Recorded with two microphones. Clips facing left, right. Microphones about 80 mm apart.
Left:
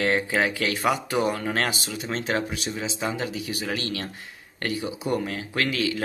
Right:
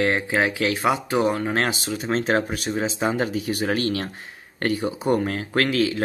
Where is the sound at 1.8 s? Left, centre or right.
Right.